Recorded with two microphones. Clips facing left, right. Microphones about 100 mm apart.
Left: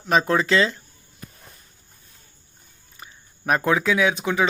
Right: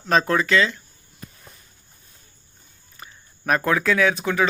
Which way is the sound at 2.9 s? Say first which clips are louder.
Right 1 dB; 15° left (ahead or behind).